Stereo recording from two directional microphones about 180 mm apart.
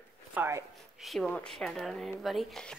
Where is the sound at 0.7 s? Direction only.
Centre (ahead or behind).